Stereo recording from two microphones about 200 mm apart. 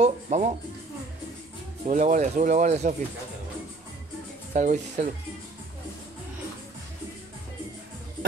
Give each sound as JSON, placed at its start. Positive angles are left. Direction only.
{"t": 0.0, "sound": "music", "side_deg": -35}
{"t": 1.9, "sound": "speech", "side_deg": -40}
{"t": 4.6, "sound": "speech", "side_deg": -40}